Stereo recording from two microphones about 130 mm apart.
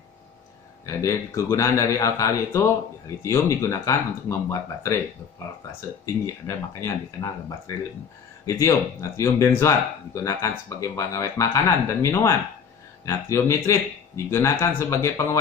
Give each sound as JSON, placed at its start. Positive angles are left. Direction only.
{"t": 0.8, "sound": "speech", "side_deg": 25}
{"t": 6.2, "sound": "speech", "side_deg": 20}